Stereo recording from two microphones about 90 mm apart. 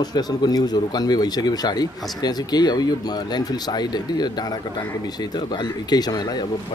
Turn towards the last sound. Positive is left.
turn(degrees=50)  # may be behind; listen again after turning